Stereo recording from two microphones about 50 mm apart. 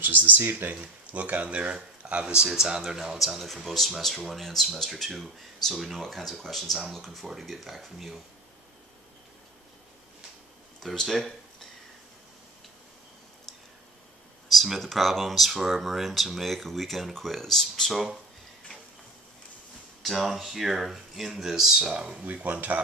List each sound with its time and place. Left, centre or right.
0.0 s speech: right
0.7 s speech: right
2.5 s speech: centre
10.8 s speech: centre
14.5 s speech: centre
20.0 s speech: centre
21.9 s speech: right